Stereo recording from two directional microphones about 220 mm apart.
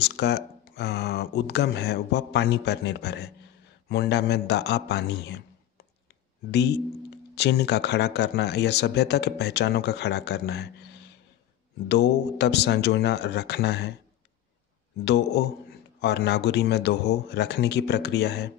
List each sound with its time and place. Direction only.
0.0 s a man's voice: 50° left (ahead or behind)
15.0 s speech: 50° left (ahead or behind)